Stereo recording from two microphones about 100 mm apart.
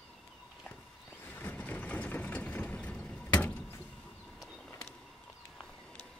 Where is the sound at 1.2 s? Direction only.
20° left (ahead or behind).